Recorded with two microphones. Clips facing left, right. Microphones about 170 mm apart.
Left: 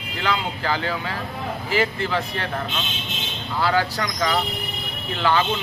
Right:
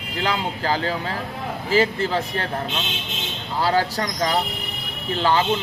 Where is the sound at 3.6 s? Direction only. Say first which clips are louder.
Right 1 dB; 35° right (ahead or behind).